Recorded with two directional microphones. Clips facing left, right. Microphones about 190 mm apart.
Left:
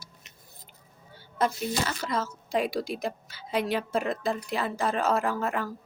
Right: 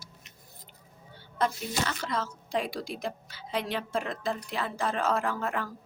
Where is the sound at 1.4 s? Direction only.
5° left (ahead or behind).